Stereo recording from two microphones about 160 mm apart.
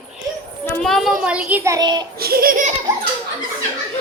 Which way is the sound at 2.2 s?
70° right (ahead or behind).